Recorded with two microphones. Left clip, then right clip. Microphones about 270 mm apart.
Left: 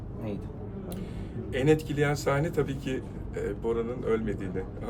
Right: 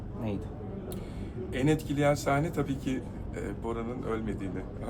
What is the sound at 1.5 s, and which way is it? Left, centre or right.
A man's voice, centre.